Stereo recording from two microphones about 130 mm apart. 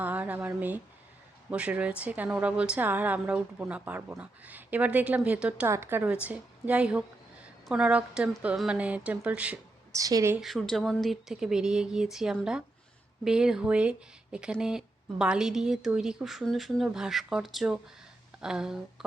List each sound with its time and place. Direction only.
0.0 s a woman's voice: 10° right (ahead or behind)
9.9 s a woman's voice: 25° right (ahead or behind)
10.4 s a woman's voice: centre (ahead or behind)